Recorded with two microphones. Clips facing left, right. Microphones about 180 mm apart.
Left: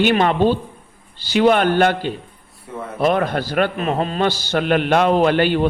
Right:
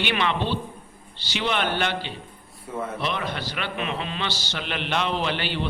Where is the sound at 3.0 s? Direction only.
50° left (ahead or behind).